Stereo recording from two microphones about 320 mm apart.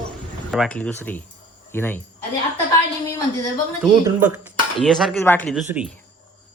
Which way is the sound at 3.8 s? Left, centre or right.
Centre.